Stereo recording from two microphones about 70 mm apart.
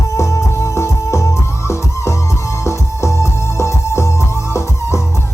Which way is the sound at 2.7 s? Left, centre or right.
Left.